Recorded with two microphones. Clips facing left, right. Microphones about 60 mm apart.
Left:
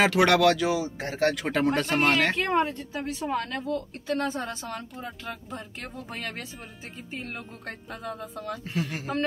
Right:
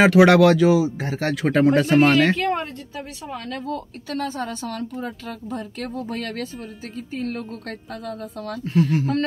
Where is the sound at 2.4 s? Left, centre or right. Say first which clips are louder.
Right 1 dB; left.